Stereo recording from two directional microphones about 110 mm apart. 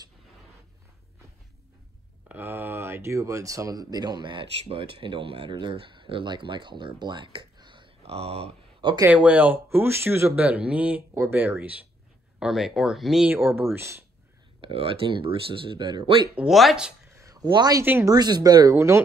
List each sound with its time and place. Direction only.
2.2 s speech: 20° right (ahead or behind); by 7.9 s 45° right (ahead or behind)
8.0 s speech: 65° right (ahead or behind)
9.1 s speech: 15° right (ahead or behind)
12.4 s speech: 5° right (ahead or behind)
13.3 s speech: 20° right (ahead or behind)
14.6 s speech: 55° right (ahead or behind)
16.3 s speech: centre (ahead or behind)
17.2 s a sound: 30° right (ahead or behind)
17.5 s speech: 40° right (ahead or behind)